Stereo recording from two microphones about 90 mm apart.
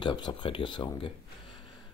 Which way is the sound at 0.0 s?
55° left (ahead or behind).